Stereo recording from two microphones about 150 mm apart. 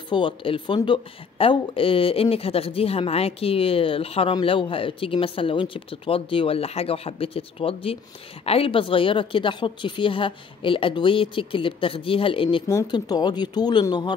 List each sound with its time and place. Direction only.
0.1 s speech: 35° left (ahead or behind)